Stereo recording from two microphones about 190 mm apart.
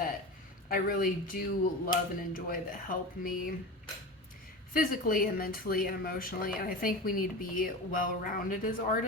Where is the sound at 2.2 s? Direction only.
50° left (ahead or behind).